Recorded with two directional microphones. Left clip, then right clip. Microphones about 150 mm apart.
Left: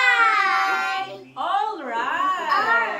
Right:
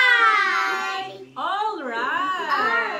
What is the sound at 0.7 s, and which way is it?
Child singing, 25° left (ahead or behind).